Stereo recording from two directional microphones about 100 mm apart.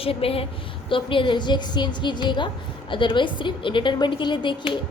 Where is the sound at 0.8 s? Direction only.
60° left (ahead or behind).